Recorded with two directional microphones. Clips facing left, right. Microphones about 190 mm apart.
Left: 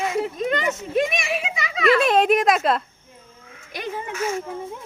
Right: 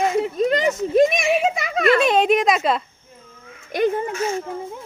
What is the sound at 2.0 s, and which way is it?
Speech, centre (ahead or behind).